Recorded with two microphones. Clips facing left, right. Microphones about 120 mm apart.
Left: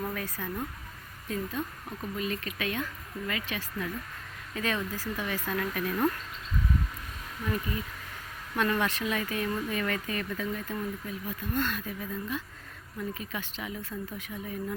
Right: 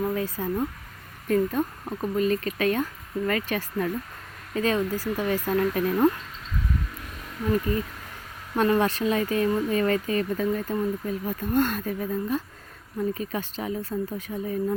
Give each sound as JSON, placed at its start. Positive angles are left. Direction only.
{"t": 0.0, "sound": "speech", "side_deg": -25}
{"t": 1.3, "sound": "speech", "side_deg": -45}
{"t": 4.5, "sound": "speech", "side_deg": -35}
{"t": 8.5, "sound": "speech", "side_deg": -35}